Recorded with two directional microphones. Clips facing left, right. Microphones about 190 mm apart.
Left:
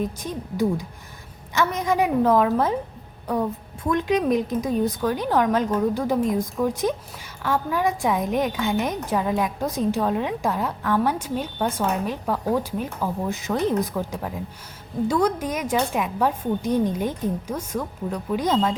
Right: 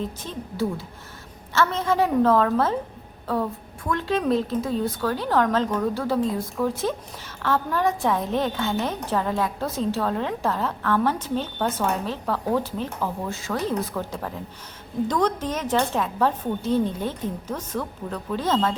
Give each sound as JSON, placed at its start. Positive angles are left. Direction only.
{"t": 0.0, "sound": "a woman's voice", "side_deg": 15}